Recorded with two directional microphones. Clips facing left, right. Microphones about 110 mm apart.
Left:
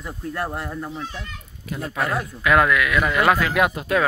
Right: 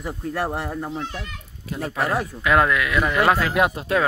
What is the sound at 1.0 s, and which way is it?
Speech, 60° right (ahead or behind).